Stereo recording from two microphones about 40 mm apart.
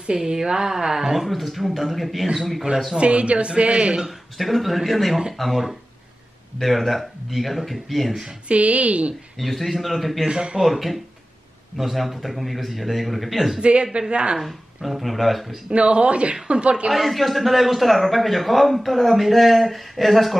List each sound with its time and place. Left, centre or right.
0.2 s a woman's voice: centre
3.0 s speech: right
4.4 s a man's voice: centre
8.5 s a woman's voice: right
9.4 s a man's voice: centre
10.2 s speech: right
10.6 s a man's voice: centre
13.6 s a woman's voice: right
14.4 s a man's voice: centre
15.7 s speech: right
16.9 s a man's voice: centre